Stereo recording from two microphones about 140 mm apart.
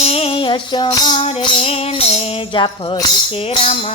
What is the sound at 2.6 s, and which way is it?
Music, 35° left (ahead or behind).